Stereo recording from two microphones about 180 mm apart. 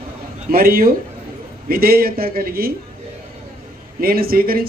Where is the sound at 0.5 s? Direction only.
55° right (ahead or behind).